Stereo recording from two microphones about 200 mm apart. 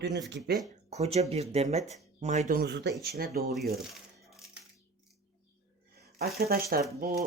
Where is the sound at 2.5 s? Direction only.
55° right (ahead or behind).